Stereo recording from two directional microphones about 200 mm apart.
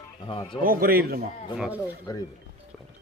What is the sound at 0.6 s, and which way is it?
Speech, 45° right (ahead or behind).